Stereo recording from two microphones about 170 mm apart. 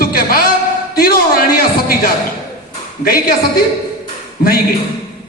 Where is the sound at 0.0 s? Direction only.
60° left (ahead or behind).